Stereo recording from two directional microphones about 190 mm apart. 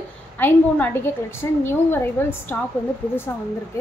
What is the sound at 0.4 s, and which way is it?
A woman's voice, 10° left (ahead or behind).